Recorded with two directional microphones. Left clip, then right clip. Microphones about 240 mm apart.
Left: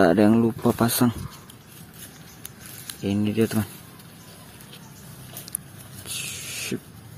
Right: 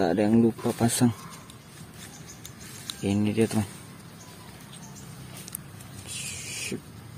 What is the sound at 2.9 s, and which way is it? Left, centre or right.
Speech, centre.